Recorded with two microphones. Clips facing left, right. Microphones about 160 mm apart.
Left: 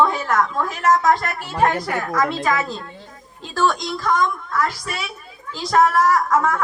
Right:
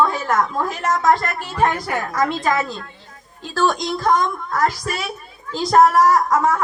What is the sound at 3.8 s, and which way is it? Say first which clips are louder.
A woman's voice: right 2 dB; 45° right (ahead or behind).